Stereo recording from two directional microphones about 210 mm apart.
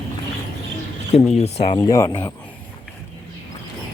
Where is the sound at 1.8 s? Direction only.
15° left (ahead or behind).